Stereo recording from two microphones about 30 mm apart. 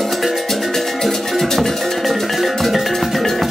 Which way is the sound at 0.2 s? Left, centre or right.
Centre.